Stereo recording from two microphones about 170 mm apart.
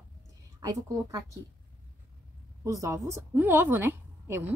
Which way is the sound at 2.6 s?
20° right (ahead or behind).